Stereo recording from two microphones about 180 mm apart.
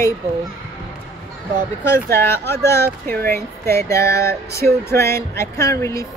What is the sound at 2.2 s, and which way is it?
Speech, 15° left (ahead or behind).